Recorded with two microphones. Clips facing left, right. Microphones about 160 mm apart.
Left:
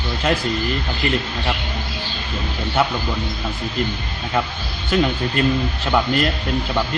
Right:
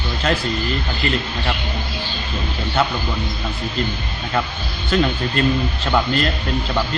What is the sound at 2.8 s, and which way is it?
Speech, 10° left (ahead or behind).